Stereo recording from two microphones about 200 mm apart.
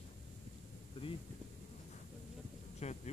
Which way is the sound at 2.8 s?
35° left (ahead or behind).